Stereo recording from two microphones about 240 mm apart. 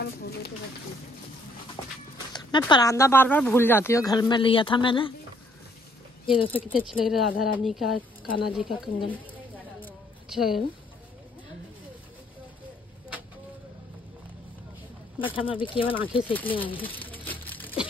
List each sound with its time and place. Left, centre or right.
0.0 s a sound: left
2.3 s speech: centre
6.3 s speech: centre
9.1 s a sound: centre
15.1 s speech: left
16.8 s crumpling: centre